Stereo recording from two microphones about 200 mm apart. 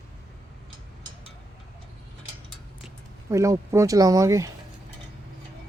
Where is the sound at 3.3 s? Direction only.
15° right (ahead or behind).